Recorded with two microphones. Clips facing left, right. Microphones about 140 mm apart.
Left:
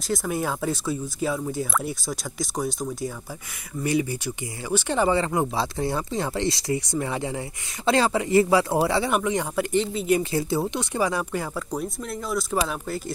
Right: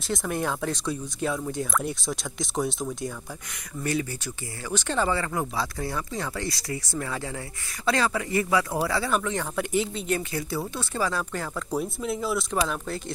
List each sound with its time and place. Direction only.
0.1 s speech: 5° left (ahead or behind)
3.8 s speech: 15° left (ahead or behind)
9.6 s speech: centre (ahead or behind)
10.3 s speech: 25° left (ahead or behind)
11.7 s speech: 5° right (ahead or behind)